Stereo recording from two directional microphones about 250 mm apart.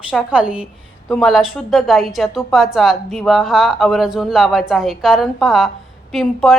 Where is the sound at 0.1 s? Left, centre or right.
Centre.